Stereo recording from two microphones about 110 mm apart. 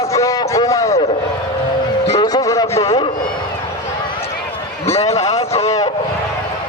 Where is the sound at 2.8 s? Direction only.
65° left (ahead or behind).